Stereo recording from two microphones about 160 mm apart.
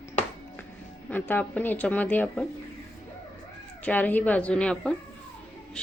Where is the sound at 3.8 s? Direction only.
10° left (ahead or behind).